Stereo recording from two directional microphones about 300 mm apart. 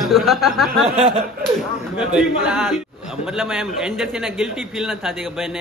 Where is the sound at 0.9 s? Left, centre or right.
Centre.